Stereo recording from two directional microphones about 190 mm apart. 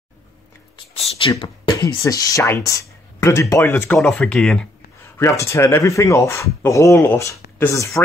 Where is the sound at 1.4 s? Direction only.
25° left (ahead or behind); by 4.6 s 5° left (ahead or behind).